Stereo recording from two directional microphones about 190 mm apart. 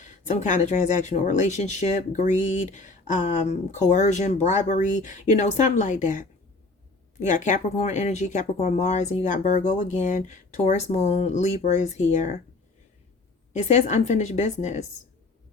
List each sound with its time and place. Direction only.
0.0 s speech: 40° left (ahead or behind)
13.5 s speech: 40° left (ahead or behind)